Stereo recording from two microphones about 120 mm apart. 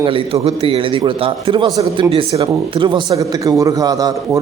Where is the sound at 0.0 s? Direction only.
50° right (ahead or behind).